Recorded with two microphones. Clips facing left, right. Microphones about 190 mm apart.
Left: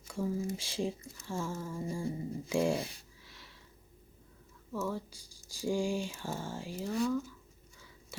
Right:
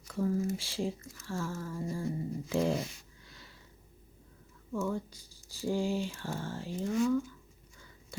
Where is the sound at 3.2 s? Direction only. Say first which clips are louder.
Right 2 dB; centre (ahead or behind).